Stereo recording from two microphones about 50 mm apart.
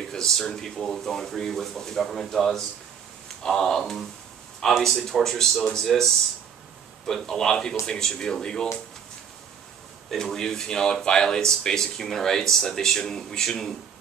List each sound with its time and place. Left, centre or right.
0.1 s speech: centre
7.1 s speech: centre
10.0 s speech: centre